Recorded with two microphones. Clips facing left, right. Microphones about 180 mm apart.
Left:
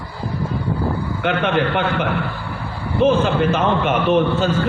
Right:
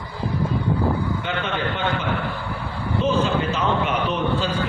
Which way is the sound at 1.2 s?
65° left (ahead or behind).